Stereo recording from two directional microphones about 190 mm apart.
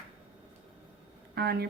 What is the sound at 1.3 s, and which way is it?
Speech, 55° right (ahead or behind).